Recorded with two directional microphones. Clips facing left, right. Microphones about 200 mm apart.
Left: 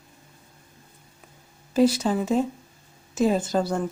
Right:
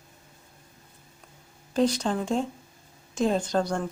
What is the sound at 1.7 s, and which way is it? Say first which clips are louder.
Speech: left 4 dB; 5° left (ahead or behind).